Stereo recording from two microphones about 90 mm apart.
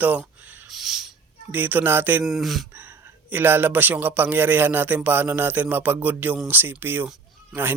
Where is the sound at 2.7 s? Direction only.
20° right (ahead or behind).